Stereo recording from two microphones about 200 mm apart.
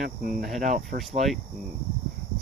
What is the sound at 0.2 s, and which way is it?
Speech, 45° right (ahead or behind).